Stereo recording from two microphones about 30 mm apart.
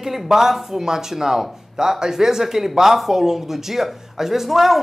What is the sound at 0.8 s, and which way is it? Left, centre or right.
Speech, centre.